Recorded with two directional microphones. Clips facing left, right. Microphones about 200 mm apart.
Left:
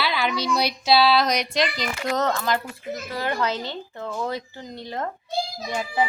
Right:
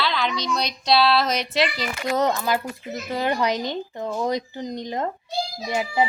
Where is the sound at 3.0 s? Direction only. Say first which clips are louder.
Right 4 dB; 20° right (ahead or behind).